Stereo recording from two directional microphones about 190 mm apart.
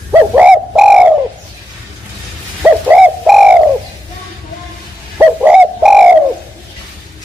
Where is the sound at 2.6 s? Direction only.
5° right (ahead or behind).